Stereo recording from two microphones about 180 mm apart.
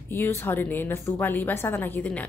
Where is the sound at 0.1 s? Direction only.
15° left (ahead or behind).